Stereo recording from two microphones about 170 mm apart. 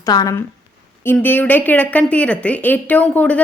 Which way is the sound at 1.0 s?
10° left (ahead or behind).